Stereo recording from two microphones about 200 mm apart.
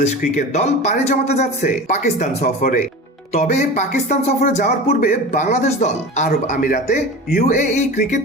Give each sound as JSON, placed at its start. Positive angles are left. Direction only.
{"t": 0.0, "sound": "speech", "side_deg": 35}